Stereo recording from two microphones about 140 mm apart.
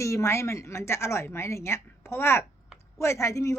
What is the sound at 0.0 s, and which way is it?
A woman's voice, 20° left (ahead or behind).